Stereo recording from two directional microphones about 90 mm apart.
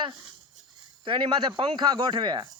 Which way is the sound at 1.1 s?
65° right (ahead or behind).